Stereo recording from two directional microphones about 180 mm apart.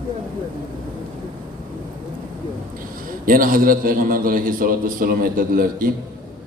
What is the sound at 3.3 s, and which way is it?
A man's voice, 50° right (ahead or behind).